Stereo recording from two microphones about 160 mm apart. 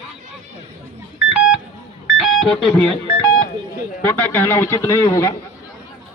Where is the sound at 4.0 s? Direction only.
15° left (ahead or behind).